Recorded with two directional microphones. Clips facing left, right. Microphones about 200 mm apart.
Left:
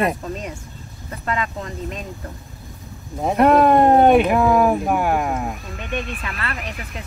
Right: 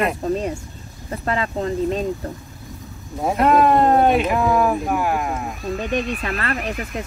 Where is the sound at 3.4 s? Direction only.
55° left (ahead or behind).